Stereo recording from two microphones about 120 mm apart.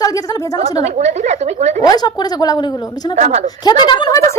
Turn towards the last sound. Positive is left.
turn(degrees=35)  # may be behind; listen again after turning